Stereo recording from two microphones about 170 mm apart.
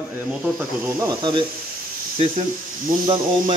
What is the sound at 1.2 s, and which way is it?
Speech, 25° right (ahead or behind).